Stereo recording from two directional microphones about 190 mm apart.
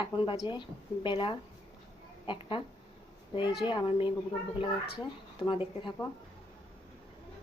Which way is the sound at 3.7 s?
25° left (ahead or behind).